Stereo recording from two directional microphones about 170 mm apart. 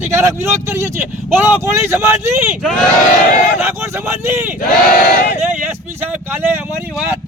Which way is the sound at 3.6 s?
15° right (ahead or behind).